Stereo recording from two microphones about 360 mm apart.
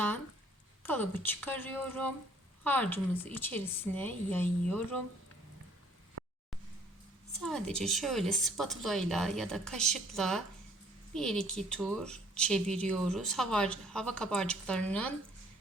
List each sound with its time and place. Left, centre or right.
0.8 s speech: centre
6.2 s a sound: right
7.4 s speech: centre